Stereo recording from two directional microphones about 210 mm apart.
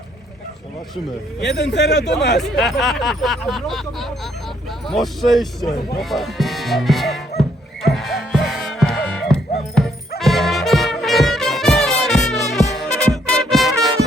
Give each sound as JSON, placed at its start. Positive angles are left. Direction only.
{"t": 1.5, "sound": "a man's voice", "side_deg": 55}
{"t": 2.4, "sound": "speech", "side_deg": 0}
{"t": 7.8, "sound": "music", "side_deg": 0}